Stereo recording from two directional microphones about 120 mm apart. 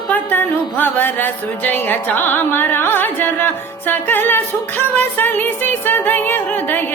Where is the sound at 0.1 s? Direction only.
15° left (ahead or behind).